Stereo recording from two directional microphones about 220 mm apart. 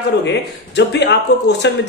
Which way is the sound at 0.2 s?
50° left (ahead or behind).